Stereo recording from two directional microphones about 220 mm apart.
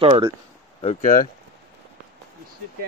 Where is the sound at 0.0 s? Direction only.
20° right (ahead or behind).